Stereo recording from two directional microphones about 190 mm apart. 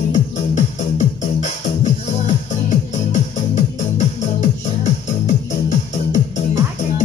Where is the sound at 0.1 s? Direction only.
40° left (ahead or behind).